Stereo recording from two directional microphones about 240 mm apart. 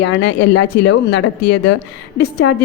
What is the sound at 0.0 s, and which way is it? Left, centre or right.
A woman's voice, left.